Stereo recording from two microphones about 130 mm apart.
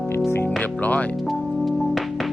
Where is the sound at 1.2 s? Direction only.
Centre (ahead or behind).